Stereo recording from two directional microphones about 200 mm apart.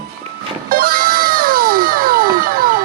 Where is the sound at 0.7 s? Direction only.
45° right (ahead or behind).